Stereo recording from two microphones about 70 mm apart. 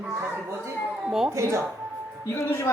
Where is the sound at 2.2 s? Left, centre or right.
Left.